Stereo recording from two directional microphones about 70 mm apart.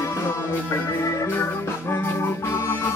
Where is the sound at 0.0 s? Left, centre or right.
Left.